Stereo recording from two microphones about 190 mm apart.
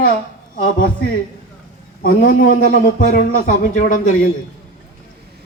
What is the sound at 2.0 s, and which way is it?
A man's voice, 50° left (ahead or behind).